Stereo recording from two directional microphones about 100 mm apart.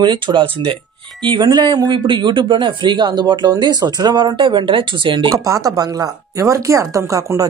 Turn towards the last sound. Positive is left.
turn(degrees=-35)  # may be behind; listen again after turning